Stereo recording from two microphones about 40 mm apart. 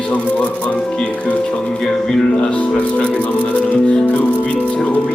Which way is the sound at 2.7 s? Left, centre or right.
Left.